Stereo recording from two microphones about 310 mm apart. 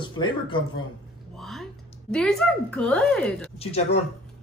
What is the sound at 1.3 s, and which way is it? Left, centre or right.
Speech, centre.